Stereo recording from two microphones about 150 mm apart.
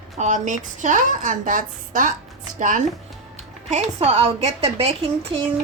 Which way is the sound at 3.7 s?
50° right (ahead or behind).